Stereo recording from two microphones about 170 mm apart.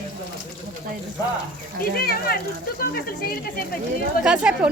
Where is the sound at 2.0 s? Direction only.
60° left (ahead or behind).